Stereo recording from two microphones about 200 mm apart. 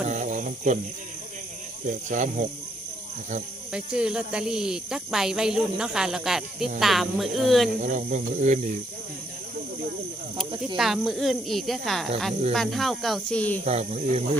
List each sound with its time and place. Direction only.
0.1 s cricket: 40° right (ahead or behind)
1.9 s speech: 40° right (ahead or behind)
3.7 s speech: 5° right (ahead or behind)
7.8 s speech: 40° right (ahead or behind)
10.8 s speech: centre (ahead or behind)
13.7 s speech: 35° right (ahead or behind)